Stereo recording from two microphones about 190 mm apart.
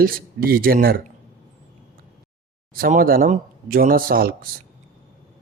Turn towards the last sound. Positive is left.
turn(degrees=-50)  # may be behind; listen again after turning